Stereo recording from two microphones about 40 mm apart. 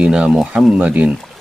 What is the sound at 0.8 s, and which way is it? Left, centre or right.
Speech, right.